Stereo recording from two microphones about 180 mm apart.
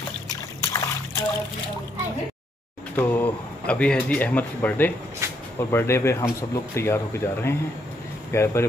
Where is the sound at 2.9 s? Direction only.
10° left (ahead or behind).